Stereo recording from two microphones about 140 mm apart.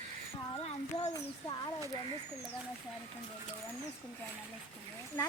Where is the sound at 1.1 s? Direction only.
30° left (ahead or behind).